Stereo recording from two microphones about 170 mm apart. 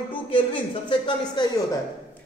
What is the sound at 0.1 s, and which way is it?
Speech, 30° left (ahead or behind).